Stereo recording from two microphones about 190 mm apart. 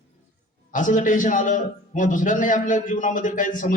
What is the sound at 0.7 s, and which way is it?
A man's voice, 40° left (ahead or behind).